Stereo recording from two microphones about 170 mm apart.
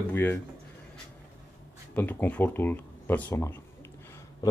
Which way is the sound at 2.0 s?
10° left (ahead or behind).